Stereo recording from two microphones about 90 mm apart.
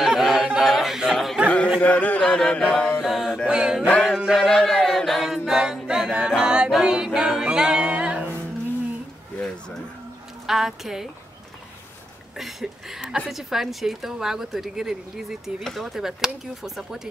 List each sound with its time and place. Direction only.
0.0 s a sound: 5° right (ahead or behind)
1.8 s carnatic music: 15° left (ahead or behind)
3.0 s a sound: 5° right (ahead or behind)
4.0 s a capella: 5° right (ahead or behind)
6.3 s music: 10° right (ahead or behind)
7.2 s male singing: 5° right (ahead or behind)
10.4 s a woman's voice: 5° right (ahead or behind)
12.4 s a sound: 5° right (ahead or behind)
13.3 s a woman's voice: 5° right (ahead or behind)